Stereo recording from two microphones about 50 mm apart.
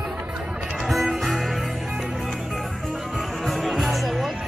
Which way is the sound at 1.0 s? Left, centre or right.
Centre.